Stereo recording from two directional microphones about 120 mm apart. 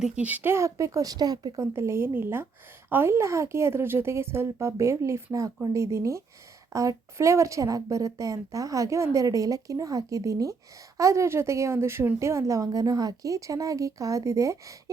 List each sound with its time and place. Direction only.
0.0 s a woman's voice: 10° right (ahead or behind); by 1.6 s 35° right (ahead or behind)
1.7 s a woman's voice: 20° right (ahead or behind)